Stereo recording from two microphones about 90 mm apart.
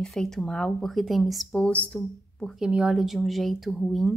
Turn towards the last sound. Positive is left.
turn(degrees=0)  # may be behind; listen again after turning